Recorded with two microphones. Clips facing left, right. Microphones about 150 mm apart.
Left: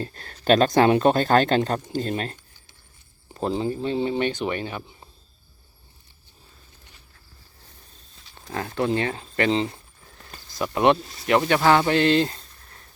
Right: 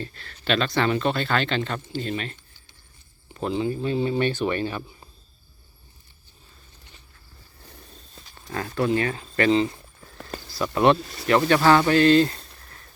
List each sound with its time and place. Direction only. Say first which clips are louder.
0.0 s speech: left 5 dB; 45° left (ahead or behind); by 5.0 s 20° left (ahead or behind)
8.4 s speech: even; 20° left (ahead or behind)